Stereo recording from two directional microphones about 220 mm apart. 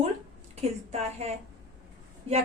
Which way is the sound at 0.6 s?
30° right (ahead or behind).